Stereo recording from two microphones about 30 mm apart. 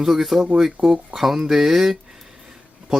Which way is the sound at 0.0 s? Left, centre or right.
Centre.